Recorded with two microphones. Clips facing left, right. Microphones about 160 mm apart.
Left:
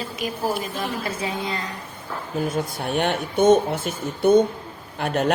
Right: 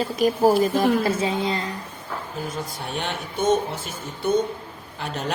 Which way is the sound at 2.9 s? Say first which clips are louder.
Left 7 dB; 55° left (ahead or behind).